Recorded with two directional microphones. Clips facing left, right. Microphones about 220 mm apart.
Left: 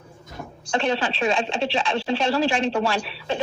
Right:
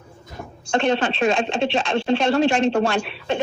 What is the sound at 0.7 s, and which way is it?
A woman's voice, 50° right (ahead or behind).